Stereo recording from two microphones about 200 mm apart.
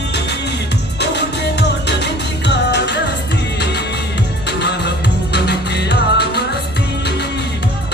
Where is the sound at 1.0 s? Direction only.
60° left (ahead or behind).